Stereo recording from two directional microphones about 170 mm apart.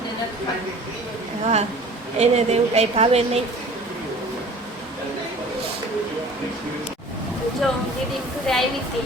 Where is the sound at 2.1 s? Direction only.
40° right (ahead or behind).